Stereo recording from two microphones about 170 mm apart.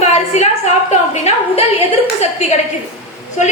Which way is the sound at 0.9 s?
40° left (ahead or behind).